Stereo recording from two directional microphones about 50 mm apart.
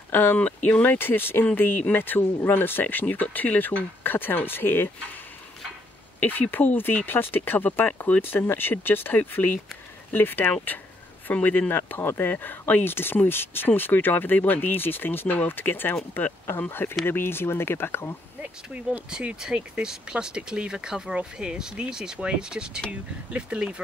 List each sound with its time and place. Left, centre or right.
0.1 s speech: left
0.4 s speech: left
0.9 s speech: left
6.1 s speech: left
12.0 s speech: left
18.4 s speech: right
19.4 s speech: centre